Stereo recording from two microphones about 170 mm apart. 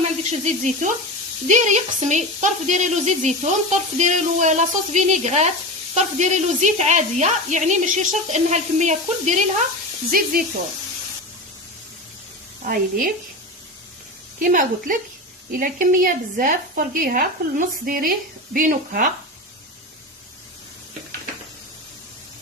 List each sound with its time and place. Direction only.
0.3 s speech: 45° right (ahead or behind)
10.1 s a woman's voice: 55° right (ahead or behind)
12.6 s a woman's voice: 55° right (ahead or behind)
14.3 s speech: 50° right (ahead or behind)